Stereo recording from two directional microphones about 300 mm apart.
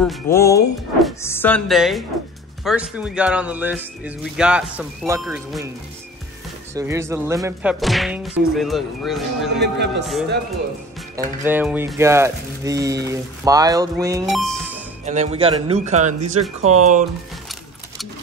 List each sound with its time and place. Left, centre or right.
0.0 s speech: centre
6.7 s speech: centre
9.6 s a man's voice: right
11.4 s speech: centre
14.3 s speech: centre
15.0 s speech: right